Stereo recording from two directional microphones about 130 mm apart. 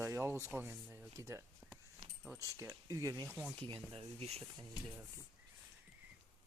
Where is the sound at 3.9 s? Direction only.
50° right (ahead or behind).